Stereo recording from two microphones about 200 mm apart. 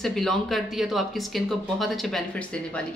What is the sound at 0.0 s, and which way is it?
A woman's voice, centre (ahead or behind).